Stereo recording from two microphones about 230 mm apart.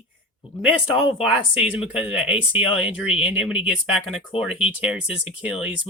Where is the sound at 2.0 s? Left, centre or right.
Centre.